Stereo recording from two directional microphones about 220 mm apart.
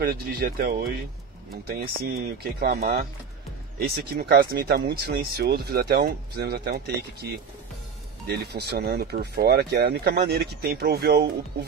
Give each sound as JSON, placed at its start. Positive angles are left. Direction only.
{"t": 0.4, "sound": "speech", "side_deg": -45}